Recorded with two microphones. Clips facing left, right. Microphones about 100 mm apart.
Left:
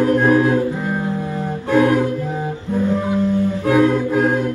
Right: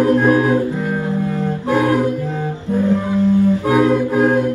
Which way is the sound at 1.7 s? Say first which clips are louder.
Left 1 dB; 15° right (ahead or behind).